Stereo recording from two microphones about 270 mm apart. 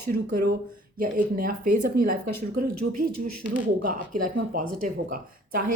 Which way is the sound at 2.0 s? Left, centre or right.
Right.